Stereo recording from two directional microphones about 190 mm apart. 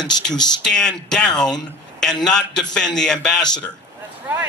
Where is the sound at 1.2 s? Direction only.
20° left (ahead or behind).